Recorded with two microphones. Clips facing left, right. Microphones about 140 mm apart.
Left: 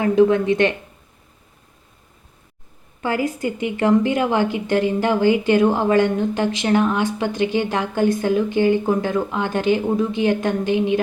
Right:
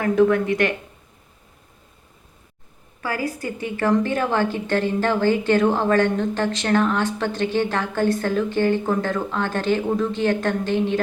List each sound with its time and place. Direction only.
0.0 s speech: 20° left (ahead or behind)
3.0 s a woman's voice: 20° left (ahead or behind)